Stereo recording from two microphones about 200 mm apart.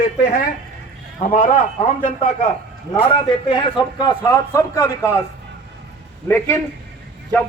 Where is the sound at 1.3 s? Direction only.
40° left (ahead or behind).